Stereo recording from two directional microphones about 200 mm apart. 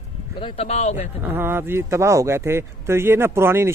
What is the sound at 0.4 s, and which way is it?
Speech, 30° left (ahead or behind).